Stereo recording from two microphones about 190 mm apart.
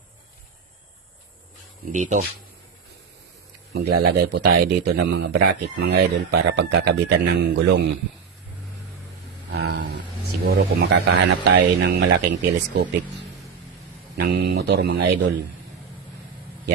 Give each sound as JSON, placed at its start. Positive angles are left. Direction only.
{"t": 1.9, "sound": "speech", "side_deg": -40}
{"t": 3.8, "sound": "speech", "side_deg": -60}
{"t": 9.5, "sound": "a sound", "side_deg": -60}
{"t": 10.4, "sound": "speech", "side_deg": -55}
{"t": 14.2, "sound": "speech", "side_deg": -65}